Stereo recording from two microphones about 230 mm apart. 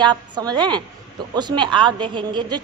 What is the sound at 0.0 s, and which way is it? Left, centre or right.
A woman's voice, centre.